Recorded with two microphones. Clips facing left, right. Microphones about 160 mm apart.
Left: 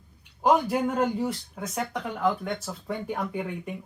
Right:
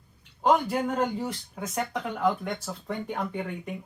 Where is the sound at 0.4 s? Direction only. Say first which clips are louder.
Left 1 dB; 10° left (ahead or behind).